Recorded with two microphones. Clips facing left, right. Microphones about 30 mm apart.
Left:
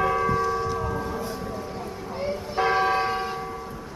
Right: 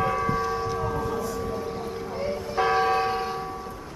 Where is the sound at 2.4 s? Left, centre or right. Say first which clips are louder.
Even; centre.